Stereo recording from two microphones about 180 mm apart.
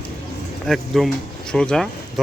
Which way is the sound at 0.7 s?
Centre (ahead or behind).